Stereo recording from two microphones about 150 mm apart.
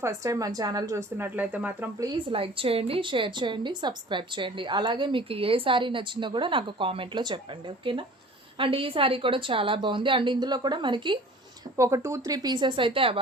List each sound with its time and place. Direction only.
0.0 s speech: 20° right (ahead or behind)
2.0 s a woman's voice: 30° right (ahead or behind)
11.8 s speech: 20° right (ahead or behind); by 13.1 s 35° right (ahead or behind)